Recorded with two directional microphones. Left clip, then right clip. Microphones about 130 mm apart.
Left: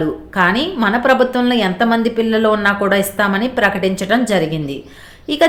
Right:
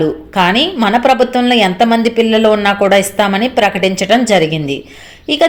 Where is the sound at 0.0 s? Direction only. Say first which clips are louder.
Right 3 dB; 20° right (ahead or behind).